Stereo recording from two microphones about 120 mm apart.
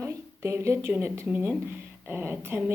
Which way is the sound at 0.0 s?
25° right (ahead or behind).